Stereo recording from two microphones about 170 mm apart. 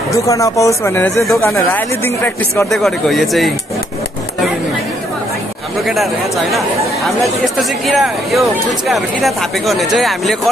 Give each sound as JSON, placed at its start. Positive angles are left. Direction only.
{"t": 0.1, "sound": "speech", "side_deg": 20}
{"t": 2.7, "sound": "speech", "side_deg": 0}
{"t": 5.9, "sound": "speech", "side_deg": 0}